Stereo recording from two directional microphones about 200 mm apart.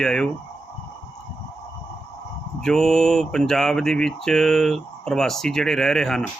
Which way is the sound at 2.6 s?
Centre (ahead or behind).